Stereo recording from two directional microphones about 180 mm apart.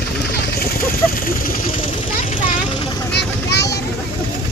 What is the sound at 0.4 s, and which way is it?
Vehicle, 55° left (ahead or behind).